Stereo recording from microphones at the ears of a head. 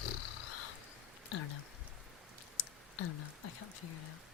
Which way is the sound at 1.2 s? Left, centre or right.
Left.